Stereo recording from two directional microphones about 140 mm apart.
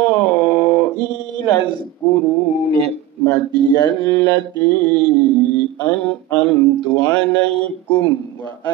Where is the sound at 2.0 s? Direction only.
10° left (ahead or behind).